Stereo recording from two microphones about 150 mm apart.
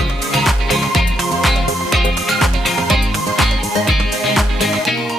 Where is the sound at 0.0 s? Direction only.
Centre (ahead or behind).